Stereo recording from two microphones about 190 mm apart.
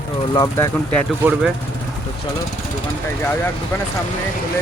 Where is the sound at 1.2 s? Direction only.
5° right (ahead or behind).